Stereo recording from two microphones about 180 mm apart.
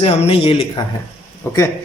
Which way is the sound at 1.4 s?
15° left (ahead or behind).